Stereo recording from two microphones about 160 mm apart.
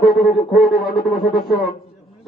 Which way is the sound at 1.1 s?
Centre (ahead or behind).